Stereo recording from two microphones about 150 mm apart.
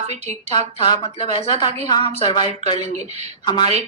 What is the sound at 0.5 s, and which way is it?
Speech, 30° left (ahead or behind).